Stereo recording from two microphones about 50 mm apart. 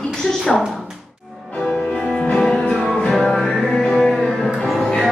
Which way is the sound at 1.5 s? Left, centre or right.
Centre.